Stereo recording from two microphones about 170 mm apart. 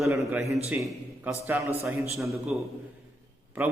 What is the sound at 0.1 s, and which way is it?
A man's voice, 15° right (ahead or behind).